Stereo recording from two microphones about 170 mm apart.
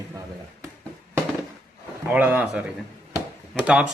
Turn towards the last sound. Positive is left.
turn(degrees=-5)  # may be behind; listen again after turning